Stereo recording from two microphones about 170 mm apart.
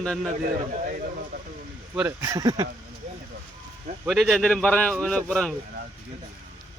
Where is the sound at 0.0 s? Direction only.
5° left (ahead or behind).